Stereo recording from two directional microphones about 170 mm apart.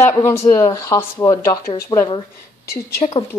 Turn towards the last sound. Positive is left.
turn(degrees=40)  # may be behind; listen again after turning